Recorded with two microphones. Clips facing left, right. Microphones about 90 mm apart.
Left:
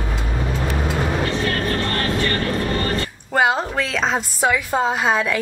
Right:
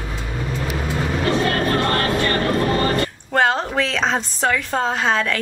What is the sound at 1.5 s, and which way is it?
Music, 35° right (ahead or behind).